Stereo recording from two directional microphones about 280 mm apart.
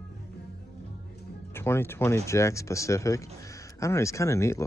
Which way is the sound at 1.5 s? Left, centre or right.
Centre.